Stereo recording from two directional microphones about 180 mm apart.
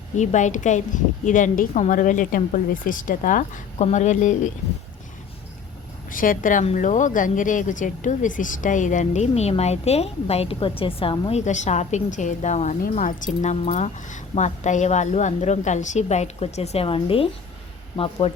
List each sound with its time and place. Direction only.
0.2 s a woman's voice: 40° left (ahead or behind)
6.1 s speech: 50° left (ahead or behind); by 18.3 s 30° left (ahead or behind)